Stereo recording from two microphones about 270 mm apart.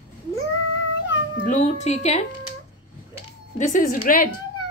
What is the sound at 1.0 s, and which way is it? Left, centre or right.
Cat, left.